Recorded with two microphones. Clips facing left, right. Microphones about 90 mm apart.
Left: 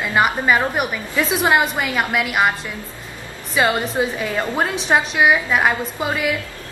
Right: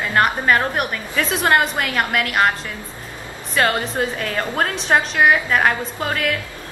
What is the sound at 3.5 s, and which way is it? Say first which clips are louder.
A woman's voice: left 1 dB; 5° left (ahead or behind).